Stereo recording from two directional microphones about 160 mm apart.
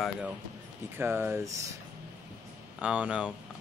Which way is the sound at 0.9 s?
15° right (ahead or behind).